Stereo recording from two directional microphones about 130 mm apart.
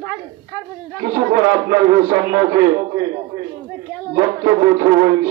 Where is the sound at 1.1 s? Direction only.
30° right (ahead or behind).